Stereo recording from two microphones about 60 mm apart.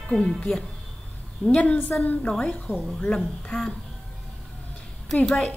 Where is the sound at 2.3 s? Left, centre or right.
Centre.